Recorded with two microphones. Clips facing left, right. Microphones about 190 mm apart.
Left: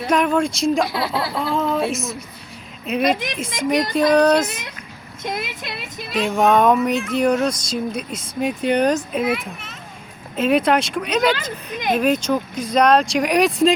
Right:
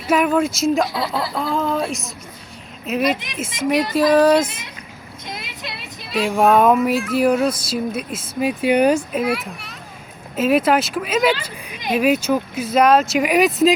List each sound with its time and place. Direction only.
0.1 s speech: 5° right (ahead or behind)
5.2 s speech: 50° left (ahead or behind)
6.1 s speech: centre (ahead or behind)